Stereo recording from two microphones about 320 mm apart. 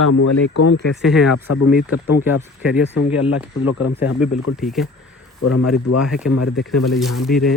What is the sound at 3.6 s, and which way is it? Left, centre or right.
Speech, left.